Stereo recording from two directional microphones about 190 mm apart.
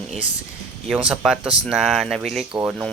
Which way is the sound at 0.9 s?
5° right (ahead or behind).